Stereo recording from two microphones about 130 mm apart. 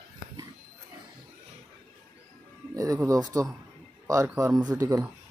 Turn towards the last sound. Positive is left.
turn(degrees=-25)  # may be behind; listen again after turning